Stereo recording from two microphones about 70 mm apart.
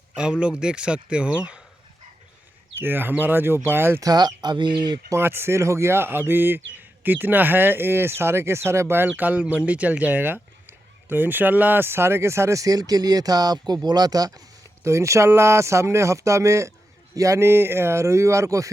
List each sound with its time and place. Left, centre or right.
0.2 s a man's voice: centre
2.7 s speech: right
4.0 s speech: right
4.4 s speech: right
5.2 s speech: right
9.1 s speech: right
14.8 s speech: right